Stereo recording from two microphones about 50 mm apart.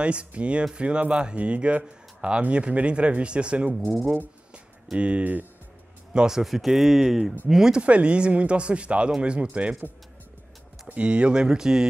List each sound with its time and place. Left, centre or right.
0.0 s speech: right
4.9 s speech: right
5.2 s speech: right
6.1 s speech: centre
7.8 s speech: right
11.0 s speech: right